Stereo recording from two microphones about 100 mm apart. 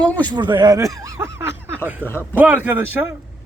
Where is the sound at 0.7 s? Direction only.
35° right (ahead or behind).